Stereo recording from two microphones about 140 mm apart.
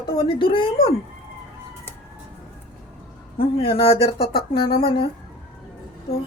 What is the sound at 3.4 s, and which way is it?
Speech, 45° left (ahead or behind).